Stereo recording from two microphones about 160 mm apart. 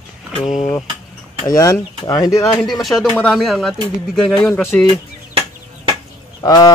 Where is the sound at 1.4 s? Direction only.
25° left (ahead or behind).